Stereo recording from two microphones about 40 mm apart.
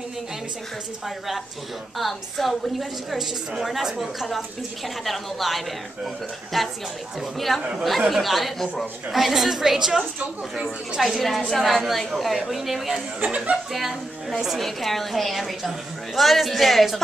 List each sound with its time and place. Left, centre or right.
1.0 s a woman's voice: centre
11.0 s a woman's voice: centre
13.2 s speech: right
14.6 s a woman's voice: centre